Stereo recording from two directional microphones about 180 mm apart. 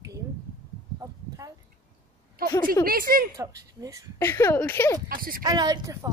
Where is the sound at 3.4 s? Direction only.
20° right (ahead or behind).